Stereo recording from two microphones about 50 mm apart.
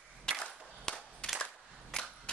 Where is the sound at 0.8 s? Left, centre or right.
Centre.